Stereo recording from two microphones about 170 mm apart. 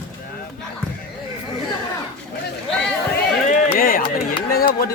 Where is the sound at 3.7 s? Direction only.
55° left (ahead or behind).